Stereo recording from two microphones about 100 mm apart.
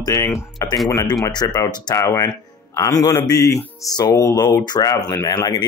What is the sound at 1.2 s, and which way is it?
Speech, 40° left (ahead or behind).